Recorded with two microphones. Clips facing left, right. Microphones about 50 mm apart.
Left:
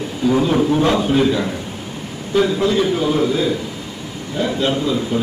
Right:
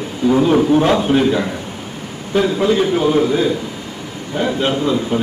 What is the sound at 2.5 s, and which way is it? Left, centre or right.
A man's voice, right.